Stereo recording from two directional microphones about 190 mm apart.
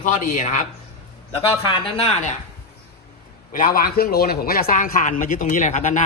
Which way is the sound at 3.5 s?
50° left (ahead or behind).